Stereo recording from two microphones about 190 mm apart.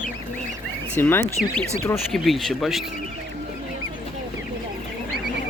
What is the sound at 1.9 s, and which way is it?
Speech, centre (ahead or behind).